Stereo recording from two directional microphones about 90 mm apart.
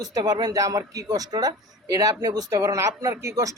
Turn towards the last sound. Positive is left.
turn(degrees=-35)  # may be behind; listen again after turning